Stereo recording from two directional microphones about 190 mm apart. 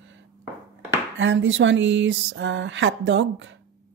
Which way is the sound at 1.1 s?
75° right (ahead or behind).